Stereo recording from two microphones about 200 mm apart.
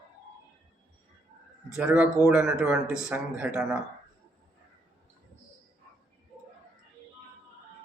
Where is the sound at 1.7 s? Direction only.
5° right (ahead or behind).